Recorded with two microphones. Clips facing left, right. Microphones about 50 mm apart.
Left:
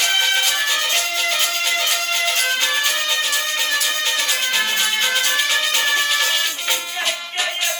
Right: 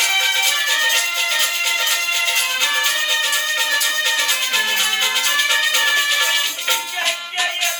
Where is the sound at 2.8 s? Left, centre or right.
Centre.